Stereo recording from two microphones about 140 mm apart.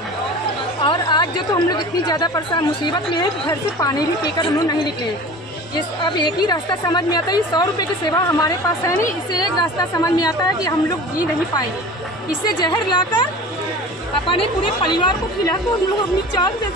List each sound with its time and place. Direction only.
0.8 s a woman's voice: 30° left (ahead or behind)
4.4 s a woman's voice: 30° left (ahead or behind)
6.0 s a woman's voice: 30° left (ahead or behind)
12.4 s a woman's voice: 30° left (ahead or behind)